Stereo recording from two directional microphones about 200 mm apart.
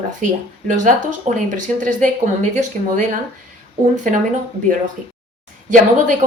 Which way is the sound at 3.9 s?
40° right (ahead or behind).